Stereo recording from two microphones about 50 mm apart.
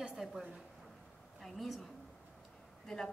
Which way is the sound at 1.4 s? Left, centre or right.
Centre.